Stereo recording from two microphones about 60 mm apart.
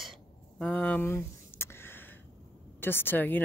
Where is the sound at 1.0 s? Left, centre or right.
Left.